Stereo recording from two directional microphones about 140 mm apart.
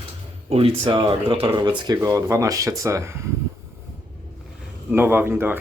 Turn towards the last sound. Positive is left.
turn(degrees=-15)  # may be behind; listen again after turning